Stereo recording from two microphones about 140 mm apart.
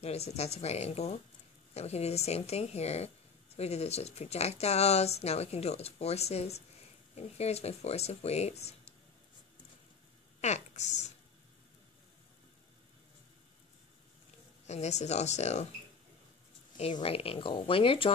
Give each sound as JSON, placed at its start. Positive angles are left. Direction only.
{"t": 0.0, "sound": "speech", "side_deg": 50}
{"t": 10.4, "sound": "speech", "side_deg": 55}
{"t": 14.7, "sound": "speech", "side_deg": 55}
{"t": 16.7, "sound": "speech", "side_deg": 50}